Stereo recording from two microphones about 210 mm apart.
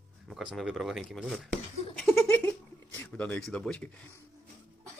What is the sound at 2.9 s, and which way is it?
Speech, 5° left (ahead or behind).